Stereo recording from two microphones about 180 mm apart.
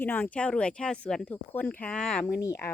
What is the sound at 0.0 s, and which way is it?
Speech, 10° left (ahead or behind).